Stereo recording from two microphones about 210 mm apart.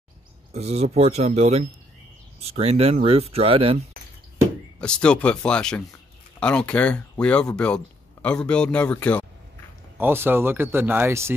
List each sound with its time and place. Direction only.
0.5 s speech: 30° right (ahead or behind)
4.7 s speech: 5° left (ahead or behind)
9.9 s speech: 10° right (ahead or behind)